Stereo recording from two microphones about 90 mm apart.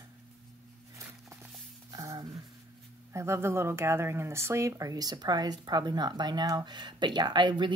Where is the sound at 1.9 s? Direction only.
45° right (ahead or behind).